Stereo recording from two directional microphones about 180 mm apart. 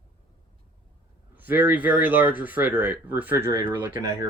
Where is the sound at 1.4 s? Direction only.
10° right (ahead or behind).